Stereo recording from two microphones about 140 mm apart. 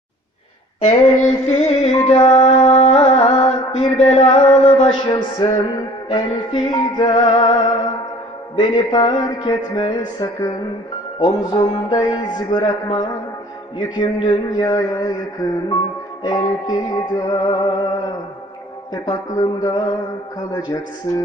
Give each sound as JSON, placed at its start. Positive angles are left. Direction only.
{"t": 0.9, "sound": "music", "side_deg": 45}
{"t": 4.3, "sound": "a sound", "side_deg": 45}
{"t": 5.0, "sound": "music", "side_deg": 30}
{"t": 6.1, "sound": "a sound", "side_deg": 35}
{"t": 11.2, "sound": "music", "side_deg": 35}
{"t": 16.2, "sound": "music", "side_deg": 30}
{"t": 19.0, "sound": "music", "side_deg": 30}